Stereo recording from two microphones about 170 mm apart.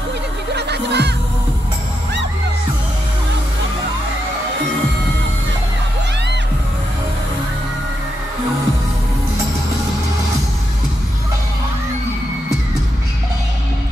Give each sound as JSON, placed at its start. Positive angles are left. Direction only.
{"t": 0.6, "sound": "music", "side_deg": -80}